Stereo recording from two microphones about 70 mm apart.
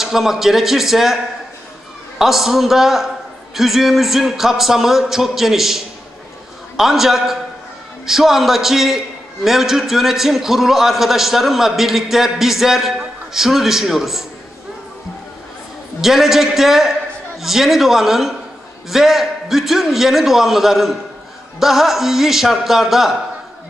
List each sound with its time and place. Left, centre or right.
0.0 s a man's voice: centre
6.8 s a man's voice: centre
16.0 s a man's voice: centre